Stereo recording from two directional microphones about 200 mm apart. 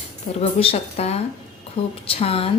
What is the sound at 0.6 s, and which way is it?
A woman's voice, 30° left (ahead or behind).